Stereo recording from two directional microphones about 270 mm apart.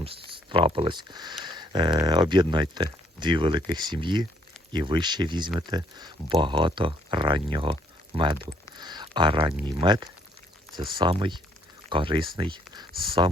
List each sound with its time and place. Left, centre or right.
0.0 s speech: centre
8.7 s a sound: centre
9.6 s speech: centre